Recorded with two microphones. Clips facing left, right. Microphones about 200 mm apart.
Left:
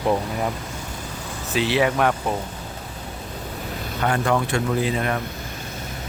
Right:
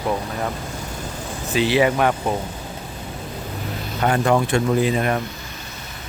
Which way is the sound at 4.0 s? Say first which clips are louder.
Right 3 dB; 20° right (ahead or behind).